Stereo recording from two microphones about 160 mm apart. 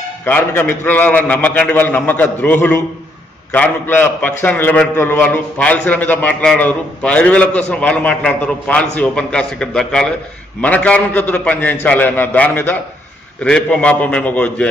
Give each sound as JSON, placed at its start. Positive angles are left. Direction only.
{"t": 0.2, "sound": "a man's voice", "side_deg": 15}